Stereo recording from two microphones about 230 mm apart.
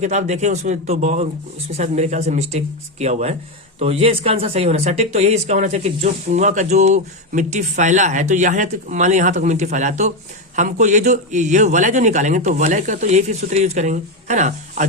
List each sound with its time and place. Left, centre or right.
0.0 s speech: right